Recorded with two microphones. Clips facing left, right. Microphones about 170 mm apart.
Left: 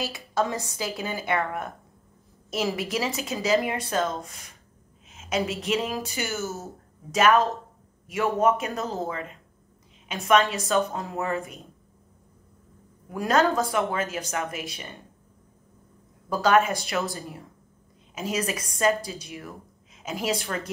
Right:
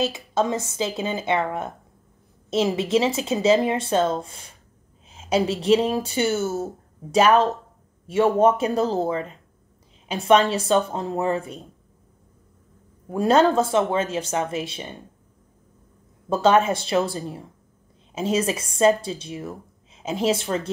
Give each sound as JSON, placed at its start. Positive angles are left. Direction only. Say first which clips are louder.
{"t": 0.0, "sound": "speech", "louder": "right 4 dB", "side_deg": -20}
{"t": 13.1, "sound": "speech", "louder": "right 5 dB", "side_deg": -30}
{"t": 16.3, "sound": "speech", "louder": "right 3 dB", "side_deg": -25}